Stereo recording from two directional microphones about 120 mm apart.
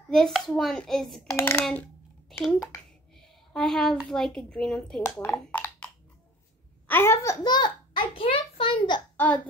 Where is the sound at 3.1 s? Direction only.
5° left (ahead or behind).